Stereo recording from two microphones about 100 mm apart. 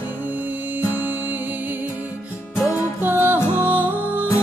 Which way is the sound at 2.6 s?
25° left (ahead or behind).